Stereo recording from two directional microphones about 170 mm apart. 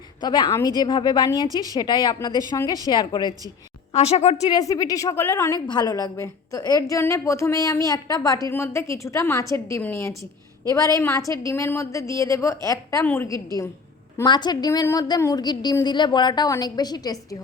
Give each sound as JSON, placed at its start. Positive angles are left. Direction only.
{"t": 0.2, "sound": "a woman's voice", "side_deg": 25}
{"t": 3.9, "sound": "a woman's voice", "side_deg": 40}
{"t": 4.5, "sound": "a woman's voice", "side_deg": 20}